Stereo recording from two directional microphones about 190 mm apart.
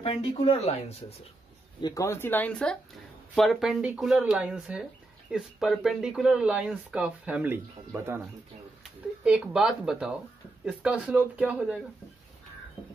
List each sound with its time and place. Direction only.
0.0 s speech: 30° left (ahead or behind)
1.8 s speech: 20° left (ahead or behind); by 8.2 s 10° right (ahead or behind)
9.2 s speech: 5° right (ahead or behind)